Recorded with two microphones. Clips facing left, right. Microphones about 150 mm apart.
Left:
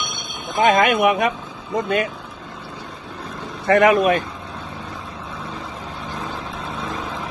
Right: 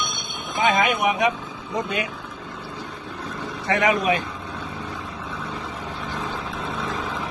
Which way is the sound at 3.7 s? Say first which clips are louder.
Left 6 dB; 55° left (ahead or behind).